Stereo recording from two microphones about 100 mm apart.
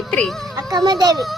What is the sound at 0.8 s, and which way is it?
Speech, 40° right (ahead or behind).